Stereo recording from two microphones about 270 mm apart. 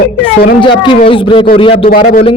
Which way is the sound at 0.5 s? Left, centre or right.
Centre.